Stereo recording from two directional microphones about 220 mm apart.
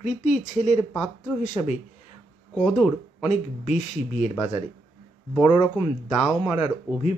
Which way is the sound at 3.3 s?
30° left (ahead or behind).